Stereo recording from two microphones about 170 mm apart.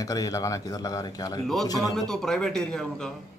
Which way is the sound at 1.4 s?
Centre (ahead or behind).